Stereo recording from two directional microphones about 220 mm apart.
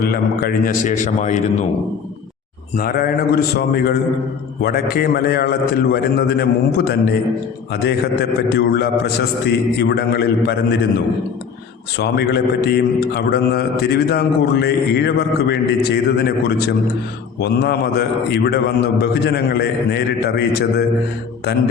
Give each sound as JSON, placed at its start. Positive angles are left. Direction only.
{"t": 0.0, "sound": "a man's voice", "side_deg": 45}
{"t": 2.7, "sound": "a man's voice", "side_deg": 45}
{"t": 11.9, "sound": "a man's voice", "side_deg": 50}